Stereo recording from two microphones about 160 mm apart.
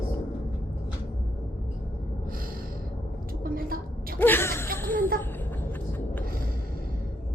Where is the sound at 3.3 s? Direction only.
65° right (ahead or behind).